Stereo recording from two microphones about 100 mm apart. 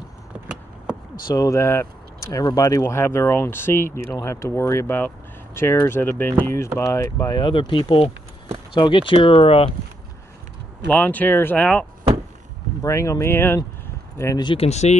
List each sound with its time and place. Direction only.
1.3 s speech: 35° left (ahead or behind)
2.8 s speech: 25° left (ahead or behind)
7.3 s speech: 55° left (ahead or behind)
10.9 s speech: 15° left (ahead or behind)
12.8 s speech: 30° left (ahead or behind)
14.8 s speech: 90° left